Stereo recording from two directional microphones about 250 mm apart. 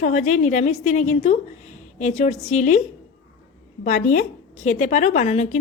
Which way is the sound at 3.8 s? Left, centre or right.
Left.